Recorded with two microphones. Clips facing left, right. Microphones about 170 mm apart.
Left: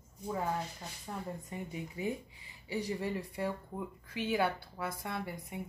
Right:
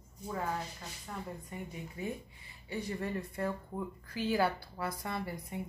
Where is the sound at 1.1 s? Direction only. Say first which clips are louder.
Left 2 dB; 15° left (ahead or behind).